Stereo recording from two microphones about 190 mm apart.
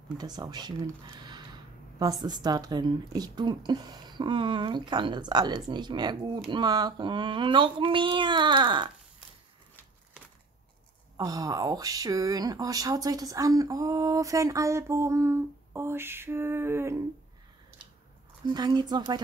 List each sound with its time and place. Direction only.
0.2 s speech: 20° right (ahead or behind)
11.1 s speech: 20° right (ahead or behind)
18.5 s speech: 20° right (ahead or behind)